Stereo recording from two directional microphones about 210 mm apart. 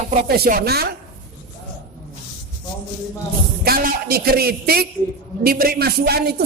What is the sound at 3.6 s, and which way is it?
A man's voice, 45° right (ahead or behind).